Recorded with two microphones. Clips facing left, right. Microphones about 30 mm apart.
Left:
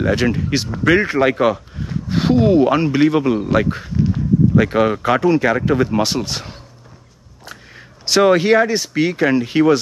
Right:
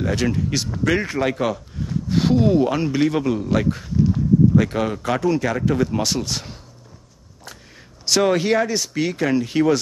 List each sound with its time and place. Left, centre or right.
0.0 s speech: left